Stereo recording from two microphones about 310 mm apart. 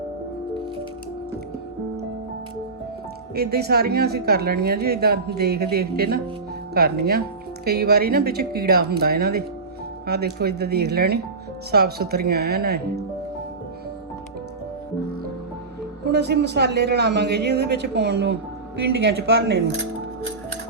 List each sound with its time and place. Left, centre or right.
3.3 s speech: right
16.0 s speech: right